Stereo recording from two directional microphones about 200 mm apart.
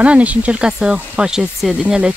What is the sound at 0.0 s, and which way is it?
Speech, 5° right (ahead or behind).